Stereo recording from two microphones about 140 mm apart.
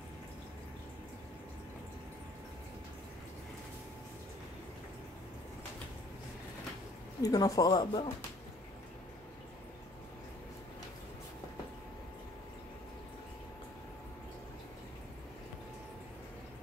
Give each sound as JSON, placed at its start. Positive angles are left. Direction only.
{"t": 7.2, "sound": "speech", "side_deg": 25}